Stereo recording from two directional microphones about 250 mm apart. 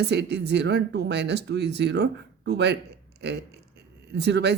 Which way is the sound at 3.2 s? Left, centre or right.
Right.